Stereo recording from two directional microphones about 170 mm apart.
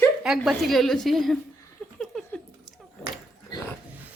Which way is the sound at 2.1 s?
5° left (ahead or behind).